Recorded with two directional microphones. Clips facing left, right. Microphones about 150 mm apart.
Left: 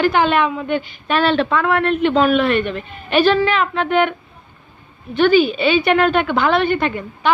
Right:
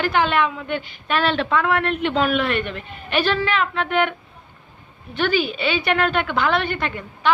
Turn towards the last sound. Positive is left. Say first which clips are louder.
# left 4 dB
turn(degrees=15)  # may be behind; listen again after turning